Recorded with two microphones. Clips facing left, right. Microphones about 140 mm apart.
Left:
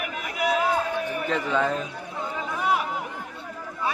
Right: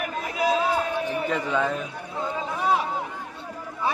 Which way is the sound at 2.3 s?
25° right (ahead or behind).